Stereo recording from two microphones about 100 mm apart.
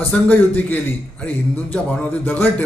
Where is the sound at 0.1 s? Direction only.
15° left (ahead or behind).